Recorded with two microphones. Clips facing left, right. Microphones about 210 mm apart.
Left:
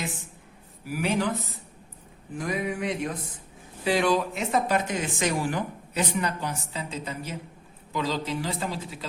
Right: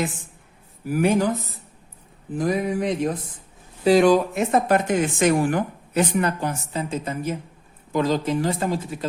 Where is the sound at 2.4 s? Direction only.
35° right (ahead or behind).